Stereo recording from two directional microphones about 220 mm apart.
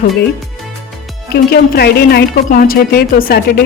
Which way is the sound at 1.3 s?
45° left (ahead or behind).